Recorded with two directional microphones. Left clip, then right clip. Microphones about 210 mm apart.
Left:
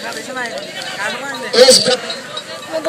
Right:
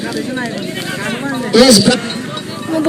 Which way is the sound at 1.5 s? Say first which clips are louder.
Even; centre (ahead or behind).